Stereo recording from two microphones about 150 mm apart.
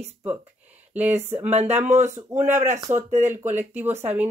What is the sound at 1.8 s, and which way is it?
Speech, 50° right (ahead or behind).